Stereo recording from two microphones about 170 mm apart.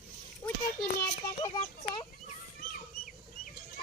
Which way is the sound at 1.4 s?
20° left (ahead or behind).